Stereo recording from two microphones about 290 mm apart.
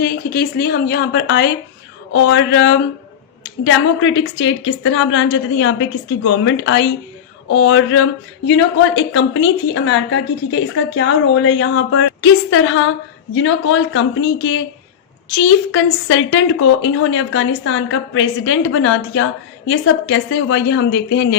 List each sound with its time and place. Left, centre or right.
0.0 s a woman's voice: left